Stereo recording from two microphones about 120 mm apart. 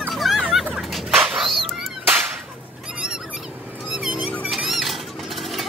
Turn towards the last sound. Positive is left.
turn(degrees=0)  # may be behind; listen again after turning